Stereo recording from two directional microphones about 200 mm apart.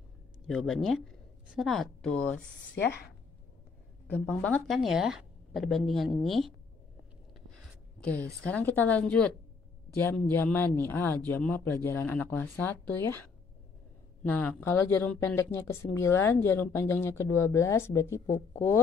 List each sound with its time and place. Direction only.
0.5 s speech: centre (ahead or behind)
4.1 s a woman's voice: 5° left (ahead or behind)
8.0 s a woman's voice: 5° left (ahead or behind)
18.2 s speech: 35° left (ahead or behind)